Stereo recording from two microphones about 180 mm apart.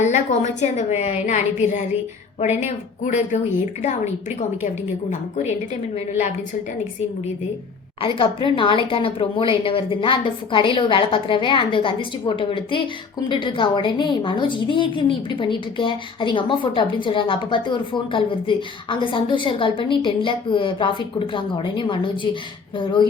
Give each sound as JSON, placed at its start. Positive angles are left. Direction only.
{"t": 0.0, "sound": "a woman's voice", "side_deg": 40}
{"t": 6.1, "sound": "a woman's voice", "side_deg": 40}
{"t": 8.0, "sound": "a woman's voice", "side_deg": 30}